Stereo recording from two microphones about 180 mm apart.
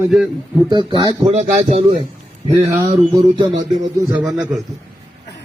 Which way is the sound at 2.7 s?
15° right (ahead or behind).